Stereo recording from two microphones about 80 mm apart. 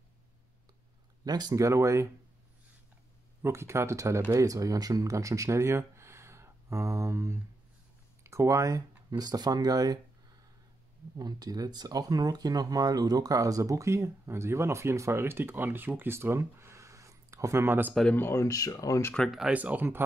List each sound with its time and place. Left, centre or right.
1.2 s speech: right
3.4 s speech: right
11.1 s speech: right
18.1 s speech: left
18.4 s speech: left
19.2 s speech: centre
19.5 s speech: centre